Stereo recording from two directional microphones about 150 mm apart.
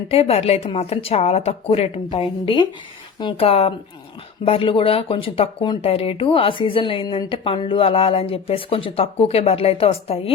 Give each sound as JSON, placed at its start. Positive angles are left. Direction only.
{"t": 0.1, "sound": "speech", "side_deg": 40}